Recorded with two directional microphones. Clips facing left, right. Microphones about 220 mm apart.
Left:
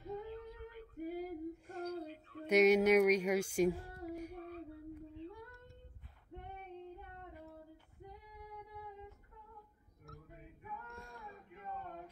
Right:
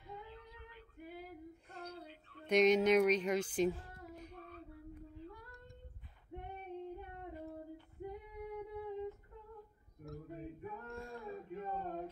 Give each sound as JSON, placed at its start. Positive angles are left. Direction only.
{"t": 0.0, "sound": "female singing", "side_deg": 40}
{"t": 2.4, "sound": "speech", "side_deg": 10}
{"t": 4.1, "sound": "female singing", "side_deg": 10}
{"t": 4.5, "sound": "a sound", "side_deg": 30}
{"t": 5.2, "sound": "female singing", "side_deg": 25}
{"t": 6.3, "sound": "female singing", "side_deg": -15}
{"t": 10.2, "sound": "a sound", "side_deg": -35}